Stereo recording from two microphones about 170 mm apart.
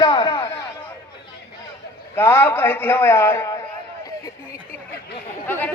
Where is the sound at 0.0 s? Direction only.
25° left (ahead or behind).